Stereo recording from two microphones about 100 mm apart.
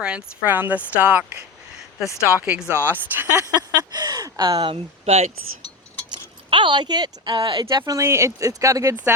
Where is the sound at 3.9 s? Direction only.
45° right (ahead or behind).